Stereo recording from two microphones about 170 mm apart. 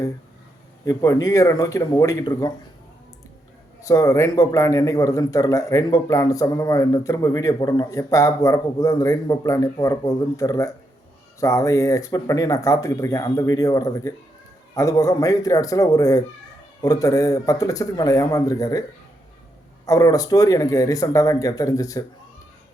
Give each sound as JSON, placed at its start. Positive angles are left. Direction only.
{"t": 0.9, "sound": "a man's voice", "side_deg": 20}
{"t": 3.8, "sound": "a man's voice", "side_deg": 20}